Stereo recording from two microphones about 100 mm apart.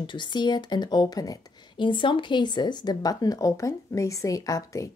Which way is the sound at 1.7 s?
55° left (ahead or behind).